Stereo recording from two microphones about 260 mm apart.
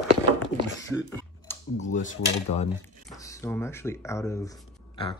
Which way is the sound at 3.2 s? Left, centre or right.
Centre.